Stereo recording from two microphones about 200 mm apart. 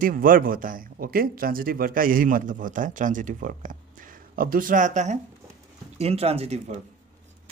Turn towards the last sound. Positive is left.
turn(degrees=-30)  # may be behind; listen again after turning